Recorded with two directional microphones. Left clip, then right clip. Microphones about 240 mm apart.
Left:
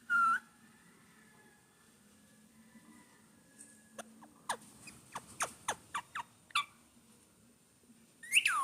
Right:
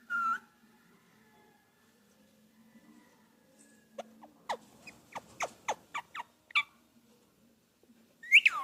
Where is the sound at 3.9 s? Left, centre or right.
Centre.